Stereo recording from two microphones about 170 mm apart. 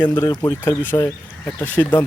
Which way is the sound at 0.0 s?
15° left (ahead or behind).